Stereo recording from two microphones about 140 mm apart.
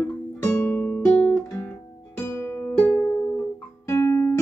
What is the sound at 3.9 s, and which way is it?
Music, 20° left (ahead or behind).